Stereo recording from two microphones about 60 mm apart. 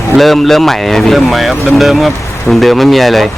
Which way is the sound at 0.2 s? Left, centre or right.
Centre.